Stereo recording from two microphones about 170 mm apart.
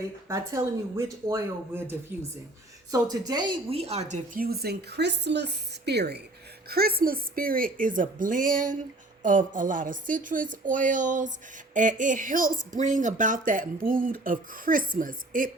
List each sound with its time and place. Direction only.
0.3 s a woman's voice: 20° right (ahead or behind); by 4.2 s 40° right (ahead or behind)
4.4 s speech: 65° right (ahead or behind)
6.7 s a woman's voice: 65° right (ahead or behind)